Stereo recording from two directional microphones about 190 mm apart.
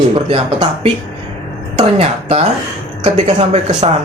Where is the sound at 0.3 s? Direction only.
30° right (ahead or behind).